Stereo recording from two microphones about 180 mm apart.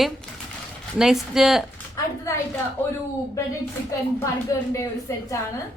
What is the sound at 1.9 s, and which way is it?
Speech, 15° left (ahead or behind).